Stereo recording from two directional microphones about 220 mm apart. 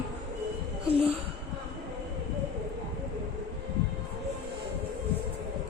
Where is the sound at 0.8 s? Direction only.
25° right (ahead or behind).